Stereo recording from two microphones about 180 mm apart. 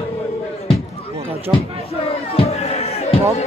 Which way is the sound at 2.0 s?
35° left (ahead or behind).